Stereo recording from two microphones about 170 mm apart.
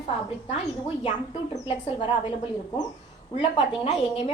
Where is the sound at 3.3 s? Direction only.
30° left (ahead or behind).